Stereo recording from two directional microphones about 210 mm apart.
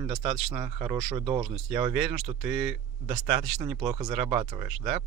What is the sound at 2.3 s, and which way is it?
Speech, 20° right (ahead or behind).